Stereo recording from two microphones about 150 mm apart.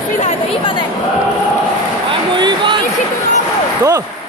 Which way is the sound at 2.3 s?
30° right (ahead or behind).